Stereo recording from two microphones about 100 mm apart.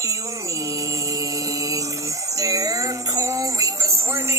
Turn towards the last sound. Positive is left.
turn(degrees=-30)  # may be behind; listen again after turning